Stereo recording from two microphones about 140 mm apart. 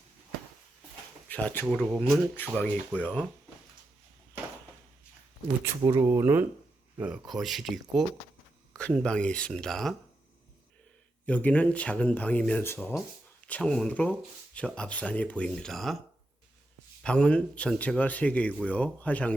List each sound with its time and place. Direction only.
1.3 s speech: 10° left (ahead or behind)
5.6 s speech: 20° right (ahead or behind)
7.0 s speech: 5° right (ahead or behind)
11.3 s speech: 10° left (ahead or behind)
13.5 s speech: 5° left (ahead or behind)
17.0 s speech: 5° left (ahead or behind)